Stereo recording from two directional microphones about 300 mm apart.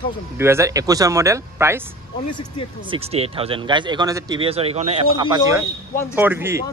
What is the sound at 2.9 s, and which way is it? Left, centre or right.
Speech, centre.